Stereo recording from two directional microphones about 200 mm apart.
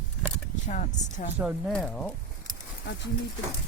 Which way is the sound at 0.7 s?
40° left (ahead or behind).